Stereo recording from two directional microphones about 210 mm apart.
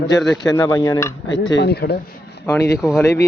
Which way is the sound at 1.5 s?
50° left (ahead or behind).